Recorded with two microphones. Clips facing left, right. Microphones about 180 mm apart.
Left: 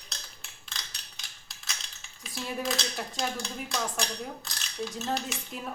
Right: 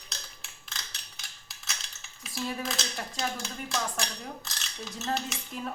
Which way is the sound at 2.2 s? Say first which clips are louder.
Even; centre (ahead or behind).